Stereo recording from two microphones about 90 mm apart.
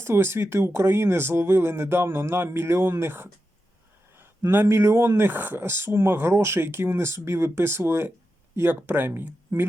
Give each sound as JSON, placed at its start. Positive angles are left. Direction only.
{"t": 0.0, "sound": "speech", "side_deg": -30}
{"t": 4.6, "sound": "speech", "side_deg": -30}